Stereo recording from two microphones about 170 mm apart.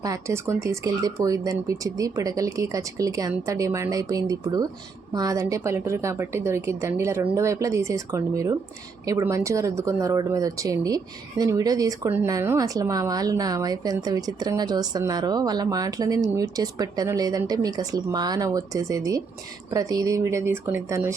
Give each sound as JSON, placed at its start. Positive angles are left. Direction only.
{"t": 0.0, "sound": "a woman's voice", "side_deg": -20}